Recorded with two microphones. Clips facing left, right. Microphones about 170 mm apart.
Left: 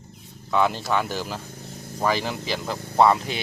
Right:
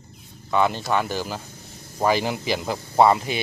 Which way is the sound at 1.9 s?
15° right (ahead or behind).